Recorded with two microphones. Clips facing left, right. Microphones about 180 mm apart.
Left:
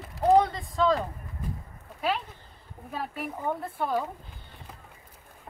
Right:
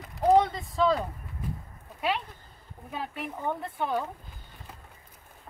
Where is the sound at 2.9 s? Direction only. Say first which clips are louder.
Left 1 dB; 5° left (ahead or behind).